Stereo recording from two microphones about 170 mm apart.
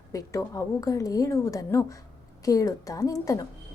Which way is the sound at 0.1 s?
20° left (ahead or behind).